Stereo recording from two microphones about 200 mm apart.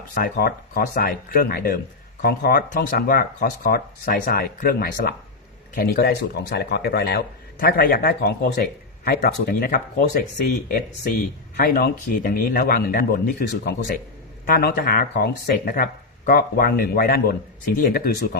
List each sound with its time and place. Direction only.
0.1 s a man's voice: 45° left (ahead or behind)
11.5 s a man's voice: 50° left (ahead or behind)